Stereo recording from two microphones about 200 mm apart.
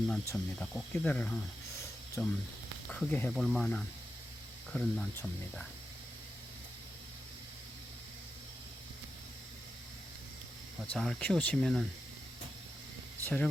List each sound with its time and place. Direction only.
0.1 s speech: 5° left (ahead or behind)
10.9 s speech: 5° left (ahead or behind)
13.2 s speech: 10° left (ahead or behind)